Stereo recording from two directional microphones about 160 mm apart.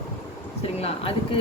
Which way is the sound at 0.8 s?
35° left (ahead or behind).